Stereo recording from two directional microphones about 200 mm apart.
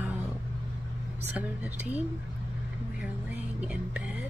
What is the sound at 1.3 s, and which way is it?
Speech, 10° right (ahead or behind).